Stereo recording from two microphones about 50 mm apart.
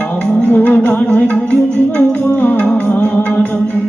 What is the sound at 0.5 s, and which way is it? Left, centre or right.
Music, left.